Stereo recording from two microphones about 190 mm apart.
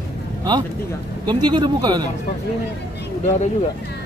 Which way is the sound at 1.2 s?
25° right (ahead or behind).